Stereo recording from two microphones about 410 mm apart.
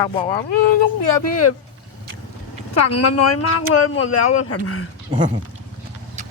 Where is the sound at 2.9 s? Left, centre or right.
Left.